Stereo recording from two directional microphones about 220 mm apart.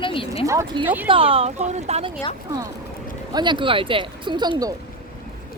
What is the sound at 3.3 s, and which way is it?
Speech, 20° right (ahead or behind).